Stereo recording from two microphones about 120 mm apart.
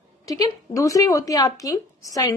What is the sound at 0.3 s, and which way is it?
A woman's voice, 30° left (ahead or behind).